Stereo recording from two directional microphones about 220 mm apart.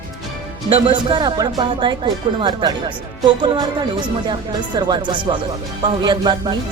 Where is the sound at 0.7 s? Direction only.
25° right (ahead or behind).